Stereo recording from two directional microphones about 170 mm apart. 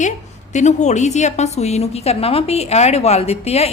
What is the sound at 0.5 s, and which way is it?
A woman's voice, 45° left (ahead or behind).